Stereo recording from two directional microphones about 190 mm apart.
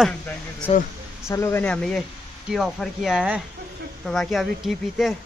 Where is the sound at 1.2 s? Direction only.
15° left (ahead or behind).